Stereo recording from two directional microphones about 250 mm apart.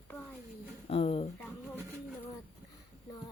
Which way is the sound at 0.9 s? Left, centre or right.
Left.